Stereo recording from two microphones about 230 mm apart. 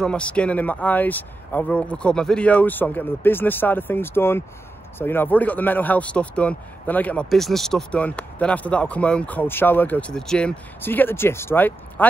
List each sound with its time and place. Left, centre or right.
0.0 s speech: centre